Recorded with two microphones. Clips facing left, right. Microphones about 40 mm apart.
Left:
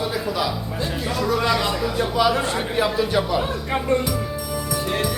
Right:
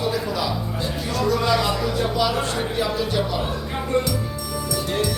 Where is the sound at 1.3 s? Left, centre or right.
Centre.